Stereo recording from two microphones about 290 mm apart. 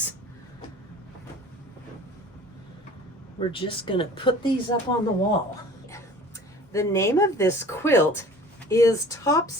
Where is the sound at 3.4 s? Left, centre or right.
Centre.